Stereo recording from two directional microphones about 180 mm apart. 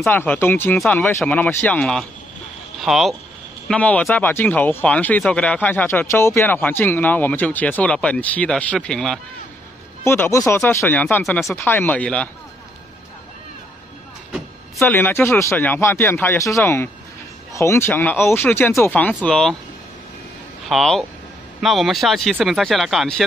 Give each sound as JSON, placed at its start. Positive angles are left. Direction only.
{"t": 0.0, "sound": "speech", "side_deg": 10}
{"t": 14.3, "sound": "speech", "side_deg": 5}
{"t": 20.6, "sound": "speech", "side_deg": 0}